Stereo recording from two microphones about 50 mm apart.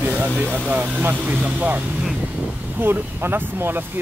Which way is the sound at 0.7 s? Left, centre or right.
Right.